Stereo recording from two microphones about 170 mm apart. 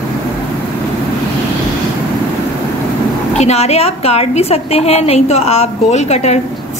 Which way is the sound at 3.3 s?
40° left (ahead or behind).